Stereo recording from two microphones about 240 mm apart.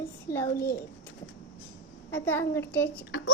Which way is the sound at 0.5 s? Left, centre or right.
Left.